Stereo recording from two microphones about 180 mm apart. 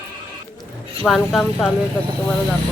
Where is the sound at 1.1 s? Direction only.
Centre (ahead or behind).